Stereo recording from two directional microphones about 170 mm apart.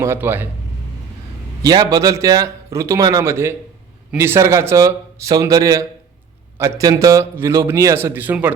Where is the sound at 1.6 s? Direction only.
20° right (ahead or behind).